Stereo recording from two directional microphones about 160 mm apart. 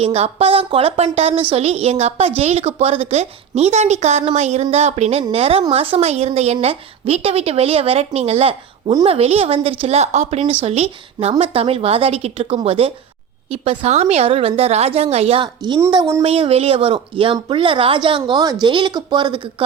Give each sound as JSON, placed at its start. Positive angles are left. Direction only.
{"t": 0.0, "sound": "a woman's voice", "side_deg": -40}
{"t": 15.6, "sound": "speech", "side_deg": -25}
{"t": 16.2, "sound": "a woman's voice", "side_deg": -35}